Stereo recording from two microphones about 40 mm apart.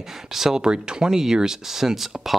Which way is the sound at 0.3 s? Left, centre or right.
Centre.